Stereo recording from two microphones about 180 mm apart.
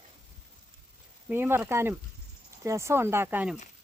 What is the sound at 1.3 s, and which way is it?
Speech, 10° right (ahead or behind).